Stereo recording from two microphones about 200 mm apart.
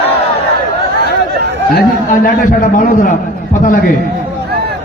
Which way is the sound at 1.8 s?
45° left (ahead or behind).